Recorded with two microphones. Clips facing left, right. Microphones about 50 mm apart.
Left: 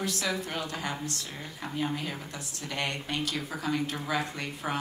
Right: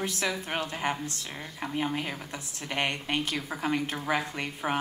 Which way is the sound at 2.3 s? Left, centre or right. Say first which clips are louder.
Right 2 dB; right.